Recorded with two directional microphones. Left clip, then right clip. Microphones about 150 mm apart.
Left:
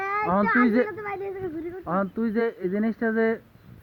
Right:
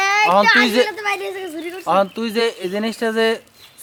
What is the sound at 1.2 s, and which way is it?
Speech, 65° right (ahead or behind).